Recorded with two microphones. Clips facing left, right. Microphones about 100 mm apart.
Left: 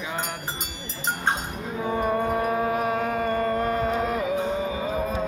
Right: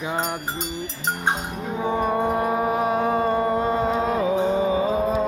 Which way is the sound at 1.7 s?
25° right (ahead or behind).